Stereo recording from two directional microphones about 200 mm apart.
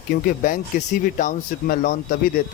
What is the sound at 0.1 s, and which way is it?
Speech, 45° left (ahead or behind).